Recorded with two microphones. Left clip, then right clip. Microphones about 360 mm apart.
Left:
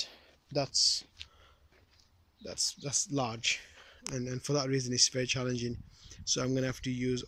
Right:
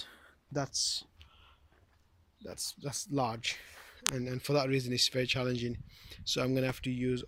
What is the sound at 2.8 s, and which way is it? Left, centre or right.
Speech, centre.